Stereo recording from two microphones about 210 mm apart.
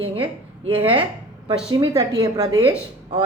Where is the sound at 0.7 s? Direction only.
25° right (ahead or behind).